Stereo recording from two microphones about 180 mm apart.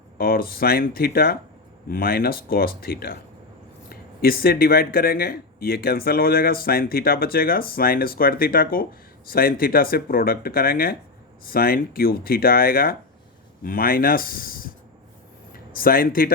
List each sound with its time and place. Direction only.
0.2 s speech: 55° left (ahead or behind)
15.7 s speech: 55° left (ahead or behind)